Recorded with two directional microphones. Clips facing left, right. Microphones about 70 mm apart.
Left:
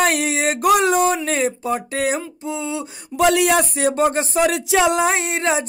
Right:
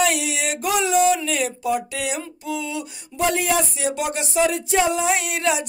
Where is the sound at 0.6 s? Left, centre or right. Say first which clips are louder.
Left 3 dB; left.